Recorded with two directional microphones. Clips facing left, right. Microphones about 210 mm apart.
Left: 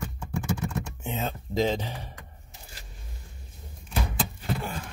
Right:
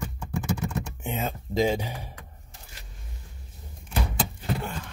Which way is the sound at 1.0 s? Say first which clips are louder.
Right 1 dB; 10° right (ahead or behind).